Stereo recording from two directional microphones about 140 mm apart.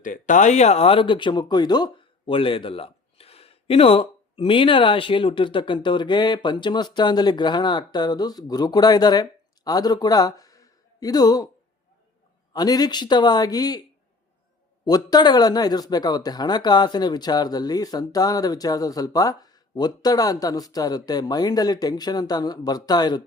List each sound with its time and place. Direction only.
0.0 s speech: 65° left (ahead or behind); by 11.4 s 30° left (ahead or behind)
12.5 s speech: 30° left (ahead or behind)
14.8 s speech: 30° left (ahead or behind)